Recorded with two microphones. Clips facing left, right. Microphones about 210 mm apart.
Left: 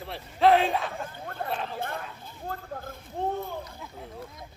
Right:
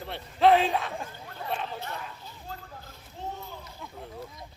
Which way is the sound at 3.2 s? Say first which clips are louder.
Left 8 dB; 55° left (ahead or behind).